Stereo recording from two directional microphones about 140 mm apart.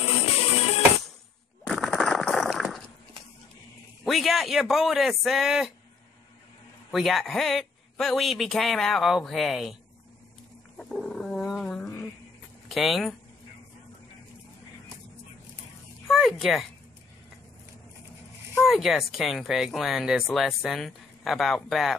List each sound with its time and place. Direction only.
0.0 s music: 45° left (ahead or behind)
1.7 s a sound: centre (ahead or behind)
4.0 s speech: centre (ahead or behind)
6.9 s speech: centre (ahead or behind)
10.8 s roaring cats: 5° left (ahead or behind)
12.6 s speech: centre (ahead or behind)
16.1 s speech: centre (ahead or behind)
18.6 s speech: centre (ahead or behind)